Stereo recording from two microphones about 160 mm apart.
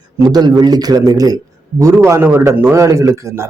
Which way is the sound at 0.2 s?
25° right (ahead or behind).